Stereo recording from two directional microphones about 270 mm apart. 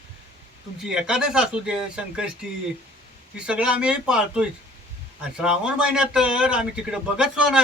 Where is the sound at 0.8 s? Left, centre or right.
Centre.